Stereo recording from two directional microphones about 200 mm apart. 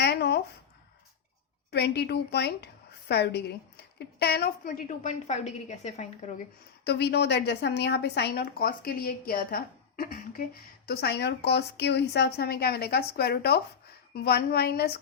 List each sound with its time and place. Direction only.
0.0 s a sound: 55° left (ahead or behind)
1.7 s a woman's voice: 55° left (ahead or behind); by 6.3 s 35° left (ahead or behind)
6.8 s a woman's voice: 55° left (ahead or behind)